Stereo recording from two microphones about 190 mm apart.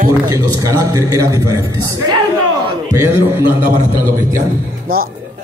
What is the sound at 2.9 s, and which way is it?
Speech, 10° right (ahead or behind).